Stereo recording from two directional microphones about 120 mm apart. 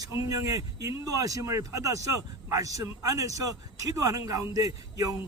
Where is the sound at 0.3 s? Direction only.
30° right (ahead or behind).